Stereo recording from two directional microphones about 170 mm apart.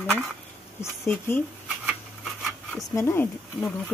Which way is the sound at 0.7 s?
15° left (ahead or behind).